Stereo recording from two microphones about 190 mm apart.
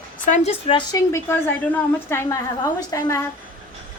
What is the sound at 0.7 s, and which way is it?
A woman's voice, 20° left (ahead or behind).